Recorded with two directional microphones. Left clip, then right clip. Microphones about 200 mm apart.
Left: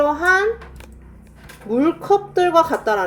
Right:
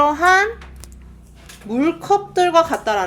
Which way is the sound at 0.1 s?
35° right (ahead or behind).